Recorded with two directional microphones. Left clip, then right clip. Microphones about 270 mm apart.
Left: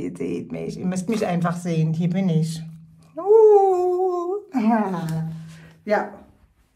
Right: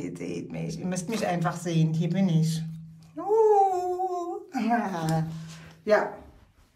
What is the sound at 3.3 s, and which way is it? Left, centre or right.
Humming, centre.